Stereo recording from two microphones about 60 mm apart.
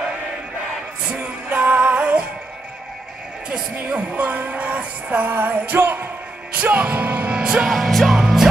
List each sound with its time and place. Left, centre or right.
1.1 s music: right
3.7 s music: right
6.5 s speech: right
7.3 s music: centre
7.7 s music: centre